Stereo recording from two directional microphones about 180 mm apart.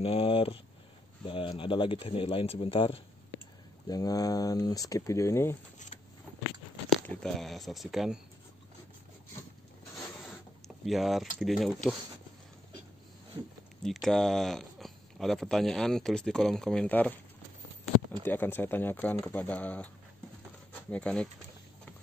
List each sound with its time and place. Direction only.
0.0 s speech: 30° left (ahead or behind)
3.8 s speech: 20° left (ahead or behind)
6.9 s speech: centre (ahead or behind)
10.9 s speech: centre (ahead or behind)
13.8 s speech: centre (ahead or behind)
18.2 s speech: 10° left (ahead or behind)
20.9 s speech: 5° left (ahead or behind)